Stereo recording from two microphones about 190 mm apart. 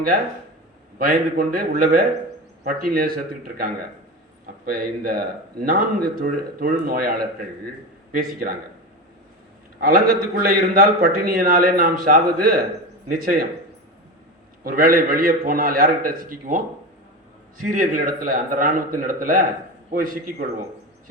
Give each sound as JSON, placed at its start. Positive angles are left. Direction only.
{"t": 0.9, "sound": "speech", "side_deg": -50}
{"t": 9.8, "sound": "speech", "side_deg": -55}
{"t": 14.6, "sound": "speech", "side_deg": -50}
{"t": 17.7, "sound": "speech", "side_deg": -45}